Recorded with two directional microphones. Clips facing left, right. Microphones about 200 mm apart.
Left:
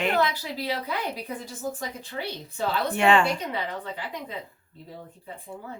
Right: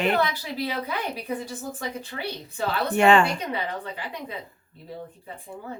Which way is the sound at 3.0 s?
45° right (ahead or behind).